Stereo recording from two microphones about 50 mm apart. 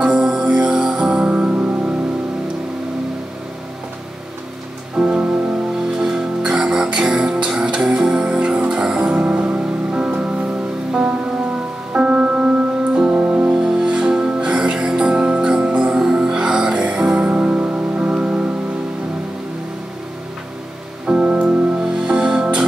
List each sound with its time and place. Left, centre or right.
0.0 s music: centre
4.9 s music: centre
11.9 s music: centre
13.2 s music: right
13.5 s music: centre
21.1 s music: right